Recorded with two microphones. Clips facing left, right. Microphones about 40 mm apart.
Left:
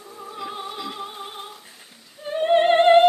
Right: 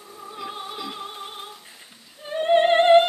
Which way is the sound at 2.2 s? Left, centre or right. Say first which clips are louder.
Left 1 dB; centre.